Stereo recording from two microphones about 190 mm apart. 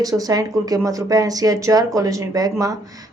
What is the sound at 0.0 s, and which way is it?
A woman's voice, 20° right (ahead or behind).